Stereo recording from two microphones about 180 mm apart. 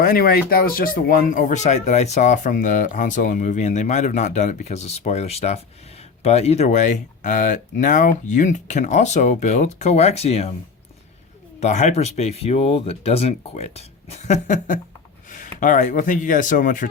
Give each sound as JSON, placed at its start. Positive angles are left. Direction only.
{"t": 0.0, "sound": "speech", "side_deg": 55}
{"t": 11.6, "sound": "speech", "side_deg": 40}